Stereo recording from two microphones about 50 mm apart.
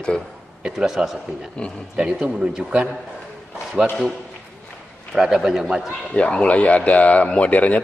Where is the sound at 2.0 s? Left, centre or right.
Centre.